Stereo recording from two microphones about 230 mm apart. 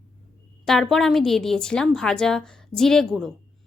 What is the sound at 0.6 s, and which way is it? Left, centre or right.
A woman's voice, centre.